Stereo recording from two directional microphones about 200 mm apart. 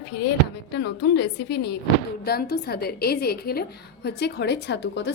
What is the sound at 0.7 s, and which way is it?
A woman's voice, 60° left (ahead or behind).